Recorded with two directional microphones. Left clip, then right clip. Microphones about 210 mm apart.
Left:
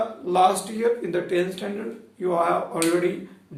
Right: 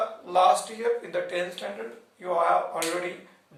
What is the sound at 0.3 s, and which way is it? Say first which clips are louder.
Speech: left 1 dB; 25° left (ahead or behind).